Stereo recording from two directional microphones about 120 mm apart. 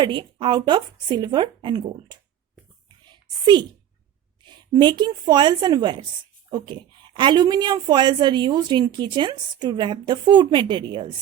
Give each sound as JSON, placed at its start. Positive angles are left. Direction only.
{"t": 0.0, "sound": "a woman's voice", "side_deg": -40}
{"t": 3.1, "sound": "a sound", "side_deg": -40}
{"t": 4.4, "sound": "a woman's voice", "side_deg": -40}